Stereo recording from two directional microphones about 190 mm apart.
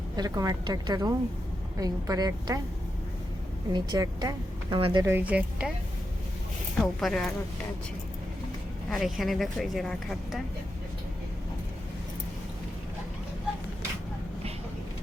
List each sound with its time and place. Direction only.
0.2 s speech: 20° right (ahead or behind)
3.7 s speech: 20° right (ahead or behind)
5.0 s speech: 10° right (ahead or behind)
6.7 s speech: centre (ahead or behind)
8.9 s speech: centre (ahead or behind)